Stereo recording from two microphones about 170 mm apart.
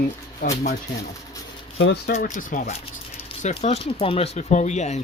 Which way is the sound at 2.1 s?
45° left (ahead or behind).